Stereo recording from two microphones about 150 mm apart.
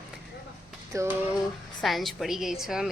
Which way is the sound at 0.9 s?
20° right (ahead or behind).